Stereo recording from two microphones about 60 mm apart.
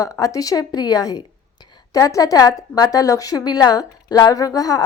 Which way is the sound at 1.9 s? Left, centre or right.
Left.